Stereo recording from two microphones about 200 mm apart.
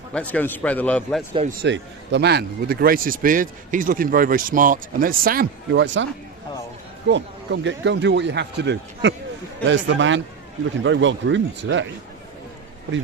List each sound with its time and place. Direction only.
0.1 s a man's voice: 5° left (ahead or behind)
1.6 s speech: 60° right (ahead or behind)
7.1 s a man's voice: 65° right (ahead or behind)